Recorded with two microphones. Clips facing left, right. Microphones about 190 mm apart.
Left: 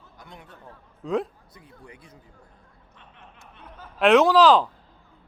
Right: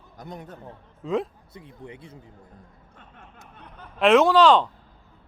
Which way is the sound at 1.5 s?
25° right (ahead or behind).